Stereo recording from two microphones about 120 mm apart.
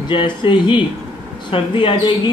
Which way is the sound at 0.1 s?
45° left (ahead or behind).